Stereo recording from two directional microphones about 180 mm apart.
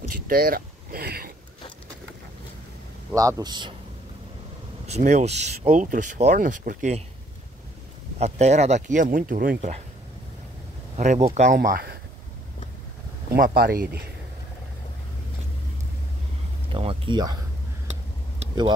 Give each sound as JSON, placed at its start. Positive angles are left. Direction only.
{"t": 0.1, "sound": "a sound", "side_deg": -55}
{"t": 3.1, "sound": "a man's voice", "side_deg": -20}
{"t": 4.8, "sound": "speech", "side_deg": -40}
{"t": 8.2, "sound": "speech", "side_deg": -40}
{"t": 11.0, "sound": "speech", "side_deg": -40}
{"t": 13.3, "sound": "speech", "side_deg": -55}
{"t": 16.7, "sound": "a sound", "side_deg": -25}